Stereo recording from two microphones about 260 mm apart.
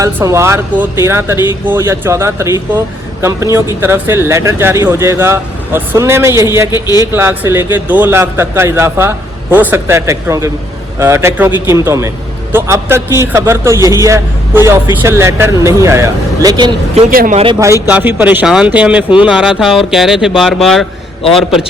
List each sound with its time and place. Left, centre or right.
0.0 s a man's voice: centre
6.7 s a man's voice: centre
7.1 s a man's voice: centre; by 17.4 s right
17.4 s a man's voice: centre